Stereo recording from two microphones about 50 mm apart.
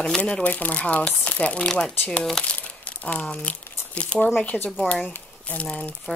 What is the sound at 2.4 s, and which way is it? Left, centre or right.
Speech, centre.